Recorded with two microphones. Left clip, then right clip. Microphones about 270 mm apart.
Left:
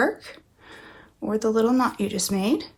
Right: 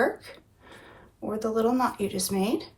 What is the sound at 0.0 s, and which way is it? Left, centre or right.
Speech, left.